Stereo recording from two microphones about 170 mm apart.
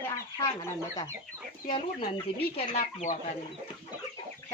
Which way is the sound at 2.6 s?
40° left (ahead or behind).